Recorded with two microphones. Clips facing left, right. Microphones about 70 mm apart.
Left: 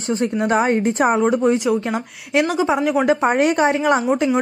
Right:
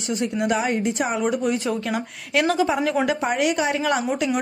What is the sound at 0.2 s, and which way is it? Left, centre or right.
A woman's voice, left.